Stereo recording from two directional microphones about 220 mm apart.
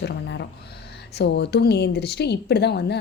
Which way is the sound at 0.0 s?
50° left (ahead or behind).